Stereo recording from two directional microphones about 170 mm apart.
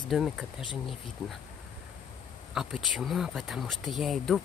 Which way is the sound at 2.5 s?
Centre (ahead or behind).